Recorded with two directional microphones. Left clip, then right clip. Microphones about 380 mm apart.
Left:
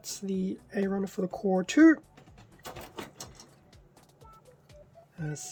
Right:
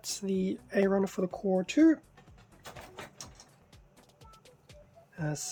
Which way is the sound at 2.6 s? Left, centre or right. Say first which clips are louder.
Left 4 dB; left.